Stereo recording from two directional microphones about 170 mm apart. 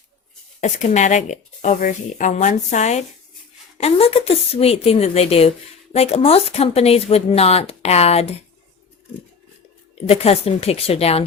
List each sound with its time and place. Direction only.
0.6 s speech: 45° left (ahead or behind)
10.1 s speech: 35° left (ahead or behind)